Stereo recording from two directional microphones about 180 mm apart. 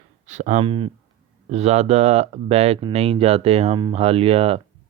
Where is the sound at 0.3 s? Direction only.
40° right (ahead or behind).